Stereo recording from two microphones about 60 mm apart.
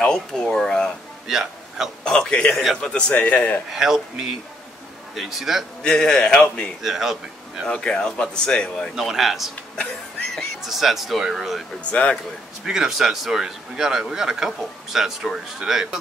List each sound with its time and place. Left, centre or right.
0.0 s speech: centre
1.2 s a sound: centre
2.0 s a man's voice: centre
3.7 s a man's voice: centre
5.8 s speech: centre
6.8 s a man's voice: centre
7.6 s speech: centre
8.9 s a man's voice: centre
11.9 s a man's voice: centre
12.6 s a man's voice: centre